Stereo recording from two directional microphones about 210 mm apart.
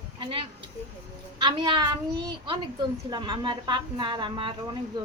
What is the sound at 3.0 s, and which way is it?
Speech, 20° right (ahead or behind).